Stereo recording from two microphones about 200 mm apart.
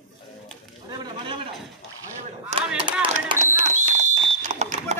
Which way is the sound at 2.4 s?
30° right (ahead or behind).